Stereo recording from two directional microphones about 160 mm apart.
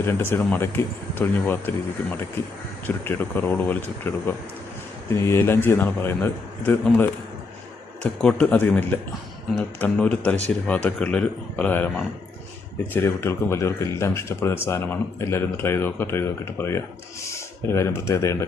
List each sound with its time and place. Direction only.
0.0 s speech: 15° left (ahead or behind)
2.8 s speech: 10° left (ahead or behind)